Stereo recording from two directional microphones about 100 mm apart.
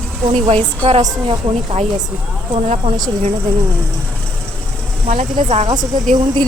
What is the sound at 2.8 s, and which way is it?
Speech, 60° right (ahead or behind).